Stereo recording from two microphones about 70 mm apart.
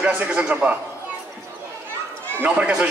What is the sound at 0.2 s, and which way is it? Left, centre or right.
Speech, right.